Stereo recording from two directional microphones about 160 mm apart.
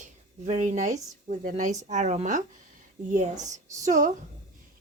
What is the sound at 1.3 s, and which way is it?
A woman's voice, 50° right (ahead or behind).